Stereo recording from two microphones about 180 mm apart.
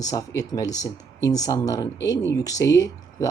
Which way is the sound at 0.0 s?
20° left (ahead or behind).